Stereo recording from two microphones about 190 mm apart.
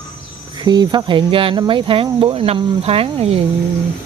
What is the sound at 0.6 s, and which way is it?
Speech, 20° right (ahead or behind).